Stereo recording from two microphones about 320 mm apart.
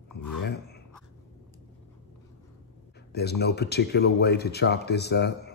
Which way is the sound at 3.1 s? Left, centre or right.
Left.